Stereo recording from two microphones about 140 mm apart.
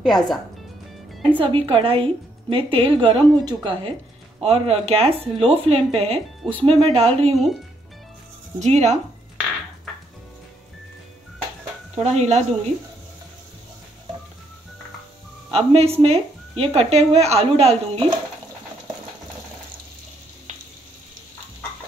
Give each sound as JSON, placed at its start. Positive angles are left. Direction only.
{"t": 0.0, "sound": "speech", "side_deg": 0}
{"t": 1.4, "sound": "a woman's voice", "side_deg": -40}
{"t": 8.5, "sound": "a woman's voice", "side_deg": -55}
{"t": 11.9, "sound": "a woman's voice", "side_deg": -50}
{"t": 15.5, "sound": "a woman's voice", "side_deg": -45}